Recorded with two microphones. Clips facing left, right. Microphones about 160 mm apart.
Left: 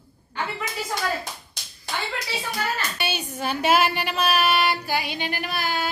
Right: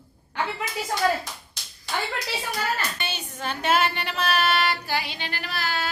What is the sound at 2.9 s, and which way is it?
Speech, 10° left (ahead or behind).